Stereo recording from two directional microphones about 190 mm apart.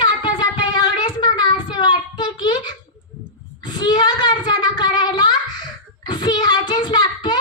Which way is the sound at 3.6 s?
25° left (ahead or behind).